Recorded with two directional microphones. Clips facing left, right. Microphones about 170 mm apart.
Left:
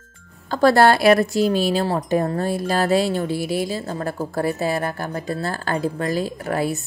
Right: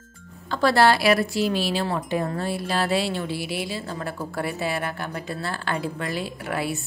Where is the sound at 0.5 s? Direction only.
45° left (ahead or behind).